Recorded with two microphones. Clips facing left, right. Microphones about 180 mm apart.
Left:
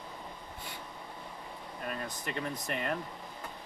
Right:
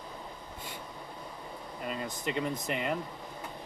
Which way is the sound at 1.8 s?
15° right (ahead or behind).